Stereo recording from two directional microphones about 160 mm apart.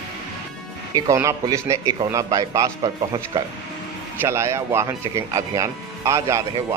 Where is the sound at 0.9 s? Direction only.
20° right (ahead or behind).